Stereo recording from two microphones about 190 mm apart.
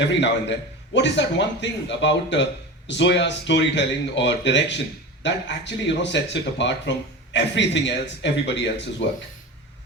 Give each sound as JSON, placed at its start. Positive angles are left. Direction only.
{"t": 0.0, "sound": "a man's voice", "side_deg": 65}